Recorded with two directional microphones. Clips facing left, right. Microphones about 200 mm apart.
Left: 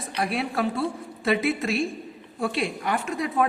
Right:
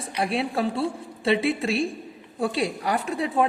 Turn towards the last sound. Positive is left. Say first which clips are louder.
# right 1 dB
turn(degrees=-30)  # may be behind; listen again after turning